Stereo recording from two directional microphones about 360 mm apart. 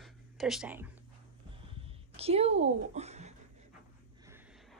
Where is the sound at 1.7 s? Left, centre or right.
Centre.